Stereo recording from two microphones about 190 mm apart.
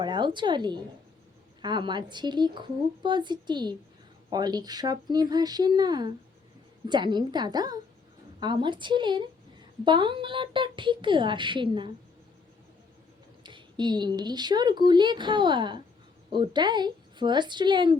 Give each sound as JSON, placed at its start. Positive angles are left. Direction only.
{"t": 0.0, "sound": "speech", "side_deg": -25}
{"t": 13.4, "sound": "speech", "side_deg": -25}